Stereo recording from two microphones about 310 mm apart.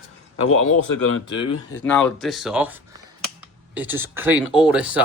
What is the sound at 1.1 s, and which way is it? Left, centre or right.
Speech, left.